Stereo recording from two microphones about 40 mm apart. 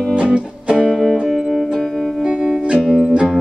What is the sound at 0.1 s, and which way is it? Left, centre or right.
Music, right.